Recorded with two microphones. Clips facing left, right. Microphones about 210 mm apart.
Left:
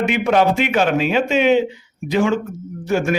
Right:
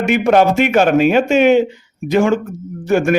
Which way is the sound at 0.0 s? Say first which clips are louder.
Right 4 dB; 45° right (ahead or behind).